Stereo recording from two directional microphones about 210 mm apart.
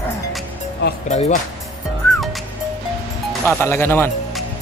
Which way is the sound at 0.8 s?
55° left (ahead or behind).